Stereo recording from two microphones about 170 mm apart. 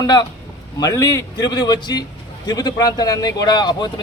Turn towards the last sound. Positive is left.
turn(degrees=25)  # may be behind; listen again after turning